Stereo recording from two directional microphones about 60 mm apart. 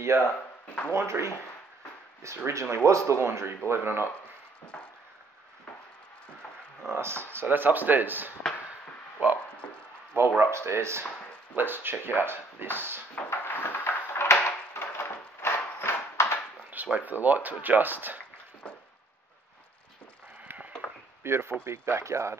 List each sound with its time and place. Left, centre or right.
0.1 s speech: right
2.2 s speech: right
6.9 s speech: right
10.4 s speech: right
11.5 s speech: right
13.2 s a sound: left
14.2 s a sound: left
16.7 s speech: right
20.4 s chop: right
21.2 s speech: right